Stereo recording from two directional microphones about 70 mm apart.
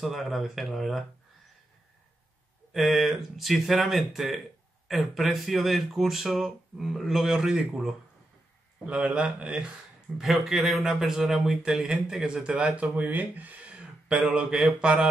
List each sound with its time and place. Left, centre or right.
0.0 s speech: centre
2.7 s speech: centre